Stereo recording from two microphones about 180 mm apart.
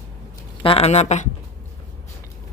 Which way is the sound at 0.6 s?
35° left (ahead or behind).